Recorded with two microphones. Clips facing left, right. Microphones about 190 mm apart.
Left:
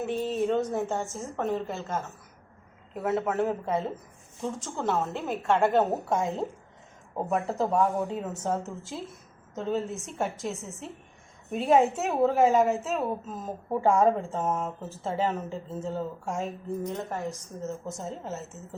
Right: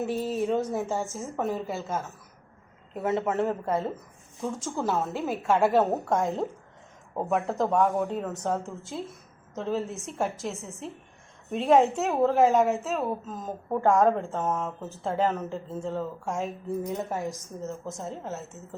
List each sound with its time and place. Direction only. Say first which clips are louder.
0.0 s a woman's voice: even; centre (ahead or behind)